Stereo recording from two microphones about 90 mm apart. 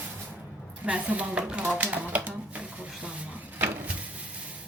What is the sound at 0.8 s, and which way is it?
Speech, 15° right (ahead or behind).